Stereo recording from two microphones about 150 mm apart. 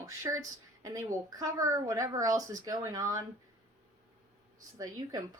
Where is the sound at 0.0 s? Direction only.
20° right (ahead or behind).